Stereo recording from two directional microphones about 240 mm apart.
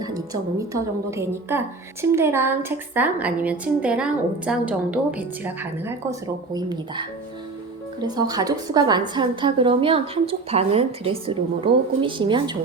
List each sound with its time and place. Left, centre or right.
0.7 s a woman's voice: centre
8.0 s a woman's voice: centre